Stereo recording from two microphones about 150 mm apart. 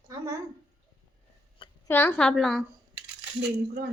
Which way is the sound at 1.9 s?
15° left (ahead or behind).